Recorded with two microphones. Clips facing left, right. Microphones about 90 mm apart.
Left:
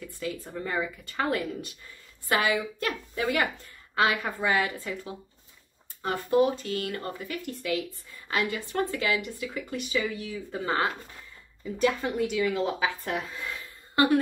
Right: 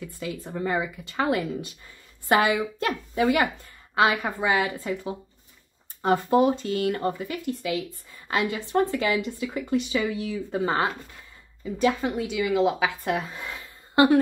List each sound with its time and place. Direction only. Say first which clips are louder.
0.2 s a woman's voice: right 3 dB; 25° right (ahead or behind)